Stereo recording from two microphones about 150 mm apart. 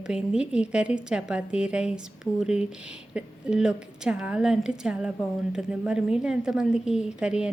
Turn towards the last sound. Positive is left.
turn(degrees=-5)  # may be behind; listen again after turning